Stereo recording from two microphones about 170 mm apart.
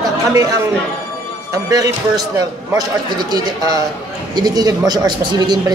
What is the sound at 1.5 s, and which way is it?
Speech, 20° right (ahead or behind).